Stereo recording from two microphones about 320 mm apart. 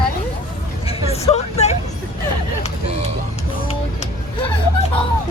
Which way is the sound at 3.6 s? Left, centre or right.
Centre.